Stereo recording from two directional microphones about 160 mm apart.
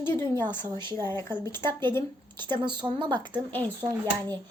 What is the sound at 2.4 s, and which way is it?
A woman's voice, 30° right (ahead or behind).